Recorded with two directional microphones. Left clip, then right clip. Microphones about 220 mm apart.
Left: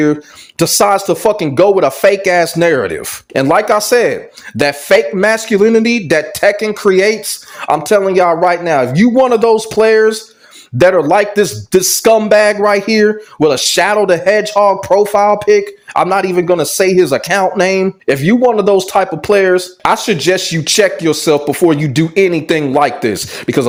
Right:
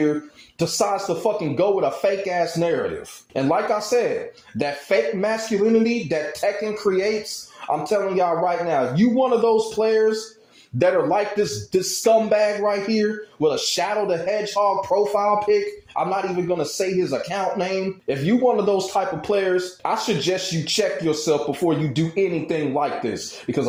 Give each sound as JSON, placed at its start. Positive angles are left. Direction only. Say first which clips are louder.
{"t": 0.6, "sound": "a man's voice", "louder": "left 11 dB", "side_deg": 45}